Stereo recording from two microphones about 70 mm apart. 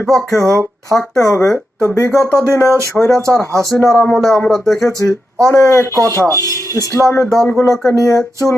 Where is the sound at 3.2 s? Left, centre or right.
Centre.